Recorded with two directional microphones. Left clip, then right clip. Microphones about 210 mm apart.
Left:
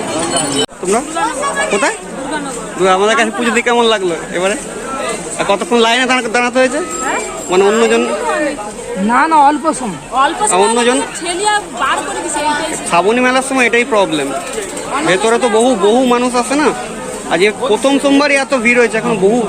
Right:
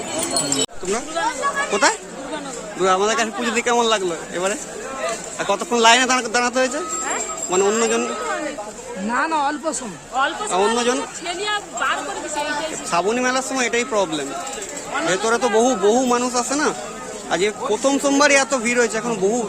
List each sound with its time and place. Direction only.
2.8 s speech: 15° right (ahead or behind)
9.0 s speech: 20° left (ahead or behind)
10.5 s speech: 15° right (ahead or behind)
11.3 s speech: centre (ahead or behind)
12.9 s speech: 15° right (ahead or behind)